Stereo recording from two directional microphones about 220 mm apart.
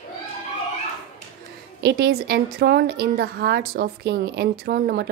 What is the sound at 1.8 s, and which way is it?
A woman's voice, 45° right (ahead or behind).